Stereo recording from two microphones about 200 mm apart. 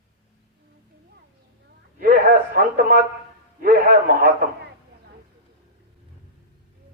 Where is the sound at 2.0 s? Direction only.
45° right (ahead or behind).